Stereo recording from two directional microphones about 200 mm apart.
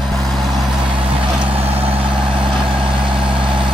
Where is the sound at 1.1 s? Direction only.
30° right (ahead or behind).